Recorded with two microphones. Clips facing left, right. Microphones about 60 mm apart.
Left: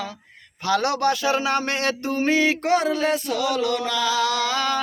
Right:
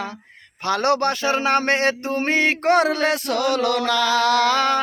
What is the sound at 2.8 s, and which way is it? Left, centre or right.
Music, right.